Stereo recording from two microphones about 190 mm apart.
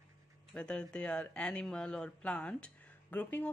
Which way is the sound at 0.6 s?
5° left (ahead or behind).